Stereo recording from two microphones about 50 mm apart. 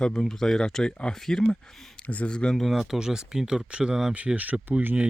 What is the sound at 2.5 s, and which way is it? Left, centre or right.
Speech, centre.